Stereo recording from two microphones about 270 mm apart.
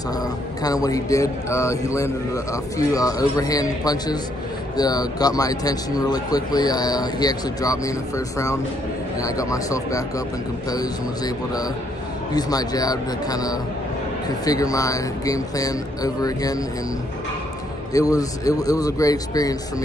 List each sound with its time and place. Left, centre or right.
0.6 s a man's voice: centre
9.2 s a man's voice: centre
17.9 s a man's voice: centre